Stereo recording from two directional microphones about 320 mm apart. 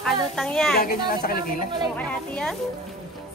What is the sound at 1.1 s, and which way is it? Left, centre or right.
Speech, left.